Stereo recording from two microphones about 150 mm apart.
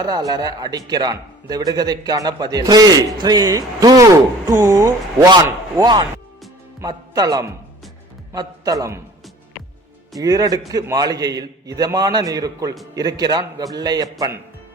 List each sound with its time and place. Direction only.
0.0 s a man's voice: 25° right (ahead or behind)
10.2 s a man's voice: 25° right (ahead or behind)